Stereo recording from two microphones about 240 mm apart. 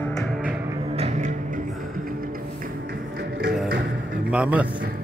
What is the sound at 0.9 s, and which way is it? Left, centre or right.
Music, right.